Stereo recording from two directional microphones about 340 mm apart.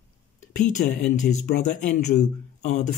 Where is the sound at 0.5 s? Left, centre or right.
Left.